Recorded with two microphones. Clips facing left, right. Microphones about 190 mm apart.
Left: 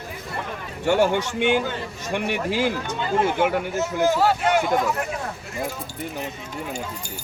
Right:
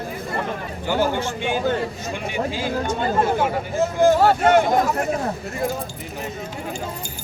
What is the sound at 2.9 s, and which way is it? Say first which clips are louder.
Speech: right 1 dB; 45° right (ahead or behind).